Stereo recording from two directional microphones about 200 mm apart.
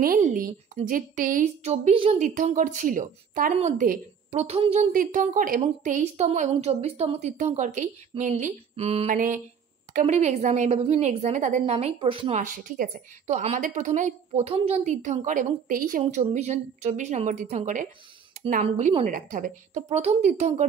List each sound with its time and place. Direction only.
0.0 s a woman's voice: 45° right (ahead or behind)
4.4 s a woman's voice: 30° right (ahead or behind)
4.9 s a woman's voice: 40° right (ahead or behind)
9.1 s a sound: 45° right (ahead or behind)
10.0 s a woman's voice: 35° right (ahead or behind)